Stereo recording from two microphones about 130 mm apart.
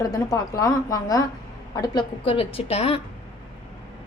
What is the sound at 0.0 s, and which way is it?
A woman's voice, 30° left (ahead or behind).